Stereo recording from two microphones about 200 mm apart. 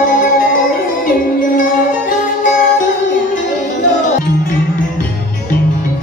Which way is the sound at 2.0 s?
40° left (ahead or behind).